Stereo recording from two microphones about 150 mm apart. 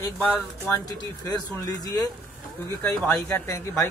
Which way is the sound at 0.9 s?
25° left (ahead or behind).